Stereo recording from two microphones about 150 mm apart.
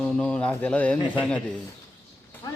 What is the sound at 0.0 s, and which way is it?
Speech, 5° left (ahead or behind).